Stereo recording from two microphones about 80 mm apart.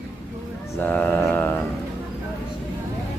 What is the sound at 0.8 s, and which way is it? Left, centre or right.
Speech, centre.